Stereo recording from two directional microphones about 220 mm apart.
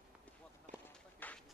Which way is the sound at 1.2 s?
10° left (ahead or behind).